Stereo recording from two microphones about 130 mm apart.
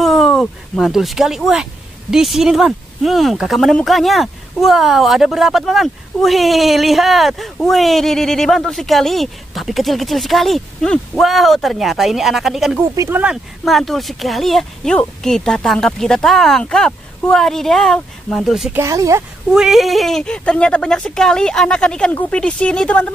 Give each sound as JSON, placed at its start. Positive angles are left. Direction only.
{"t": 0.0, "sound": "speech", "side_deg": 0}
{"t": 18.7, "sound": "speech", "side_deg": -20}
{"t": 19.5, "sound": "speech", "side_deg": 0}